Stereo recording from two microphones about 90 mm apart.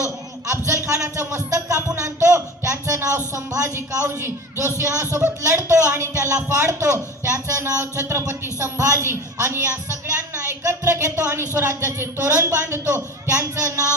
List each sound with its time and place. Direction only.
0.0 s a man's voice: 35° right (ahead or behind)